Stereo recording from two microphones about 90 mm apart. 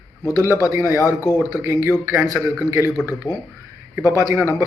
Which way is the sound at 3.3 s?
35° left (ahead or behind).